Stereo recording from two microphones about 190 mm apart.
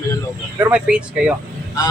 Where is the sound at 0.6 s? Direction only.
5° right (ahead or behind).